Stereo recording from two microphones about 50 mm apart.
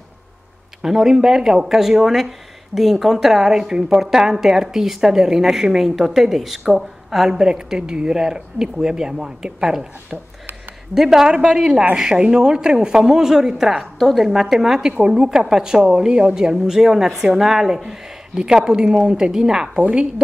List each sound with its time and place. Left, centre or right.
0.8 s a woman's voice: centre